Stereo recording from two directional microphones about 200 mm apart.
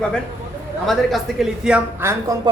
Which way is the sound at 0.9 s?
Centre (ahead or behind).